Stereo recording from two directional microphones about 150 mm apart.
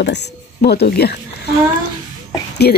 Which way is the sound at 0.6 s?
90° left.